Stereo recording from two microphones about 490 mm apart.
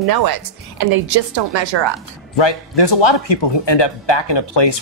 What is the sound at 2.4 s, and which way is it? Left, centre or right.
Speech, left.